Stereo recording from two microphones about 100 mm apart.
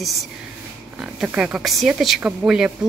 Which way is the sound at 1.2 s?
10° right (ahead or behind).